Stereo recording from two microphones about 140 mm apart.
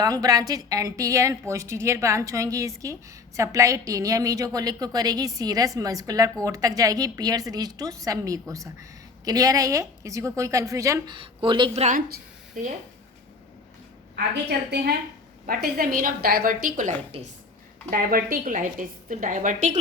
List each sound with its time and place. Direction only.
0.0 s a woman's voice: 25° right (ahead or behind)
11.1 s speech: 40° right (ahead or behind)
11.7 s speech: 50° right (ahead or behind)
15.4 s a woman's voice: 90° right; by 16.9 s 75° right (ahead or behind)
17.1 s speech: 45° right (ahead or behind)
17.9 s a woman's voice: 90° right; by 19.8 s 65° right (ahead or behind)